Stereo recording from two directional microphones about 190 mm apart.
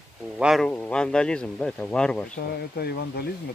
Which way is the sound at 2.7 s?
60° left (ahead or behind).